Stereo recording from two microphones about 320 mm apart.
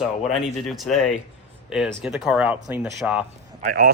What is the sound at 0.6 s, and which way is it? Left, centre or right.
Speech, centre.